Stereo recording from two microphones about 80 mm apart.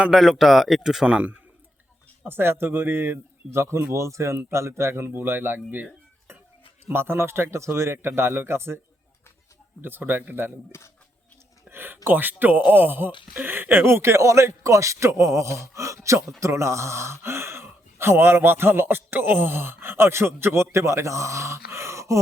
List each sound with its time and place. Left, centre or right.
0.0 s speech: centre
2.2 s a man's voice: right
9.8 s a man's voice: right
10.7 s speech: left
11.7 s a sound: right
12.0 s a man's voice: right